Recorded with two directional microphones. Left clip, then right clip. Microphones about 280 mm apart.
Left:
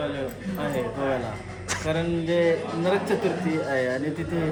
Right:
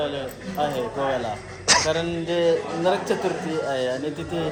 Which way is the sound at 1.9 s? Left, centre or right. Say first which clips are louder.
Right 1 dB; centre.